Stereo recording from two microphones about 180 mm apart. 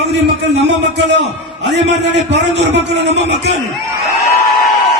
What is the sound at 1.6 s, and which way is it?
A man's voice, 70° right (ahead or behind).